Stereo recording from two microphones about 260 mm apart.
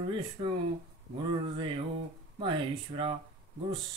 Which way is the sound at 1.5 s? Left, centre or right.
Centre.